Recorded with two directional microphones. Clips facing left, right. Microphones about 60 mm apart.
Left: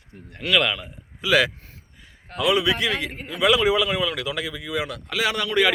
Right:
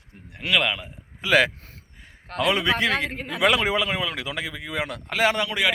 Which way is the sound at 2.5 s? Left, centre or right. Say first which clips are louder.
Left 1 dB; right.